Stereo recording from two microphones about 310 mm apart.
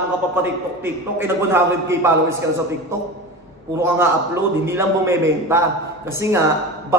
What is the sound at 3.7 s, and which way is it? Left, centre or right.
A man's voice, centre.